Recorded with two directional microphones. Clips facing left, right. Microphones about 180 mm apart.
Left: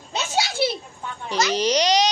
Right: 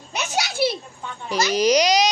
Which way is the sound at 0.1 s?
25° left (ahead or behind).